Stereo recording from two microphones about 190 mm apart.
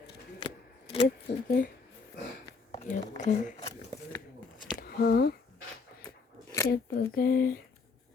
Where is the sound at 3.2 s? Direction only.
40° left (ahead or behind).